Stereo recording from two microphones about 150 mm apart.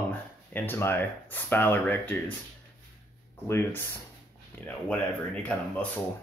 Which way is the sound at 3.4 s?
15° left (ahead or behind).